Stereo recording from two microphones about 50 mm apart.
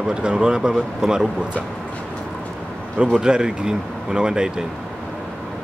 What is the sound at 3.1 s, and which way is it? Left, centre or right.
Speech, centre.